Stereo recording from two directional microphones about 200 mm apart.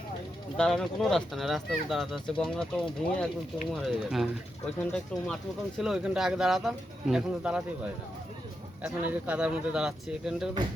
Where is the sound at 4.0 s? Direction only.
Centre (ahead or behind).